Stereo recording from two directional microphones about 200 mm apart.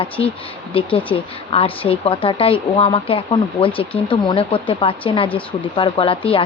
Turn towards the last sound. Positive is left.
turn(degrees=25)  # may be behind; listen again after turning